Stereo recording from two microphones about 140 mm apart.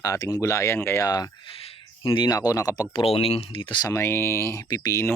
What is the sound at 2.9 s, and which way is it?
Speech, 40° left (ahead or behind).